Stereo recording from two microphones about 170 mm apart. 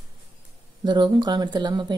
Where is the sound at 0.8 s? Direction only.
25° right (ahead or behind).